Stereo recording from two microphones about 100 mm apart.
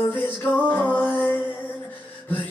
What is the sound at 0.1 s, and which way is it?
Music, 20° left (ahead or behind).